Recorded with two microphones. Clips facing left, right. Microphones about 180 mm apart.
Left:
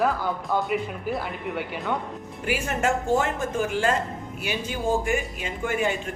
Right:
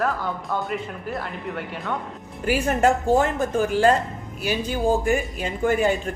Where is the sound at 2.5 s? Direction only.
40° right (ahead or behind).